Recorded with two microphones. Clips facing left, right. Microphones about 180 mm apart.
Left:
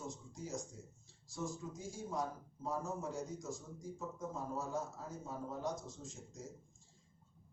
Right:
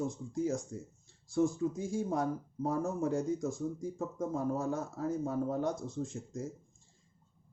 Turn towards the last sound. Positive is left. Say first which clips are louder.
# right 12 dB
turn(degrees=-60)  # may be behind; listen again after turning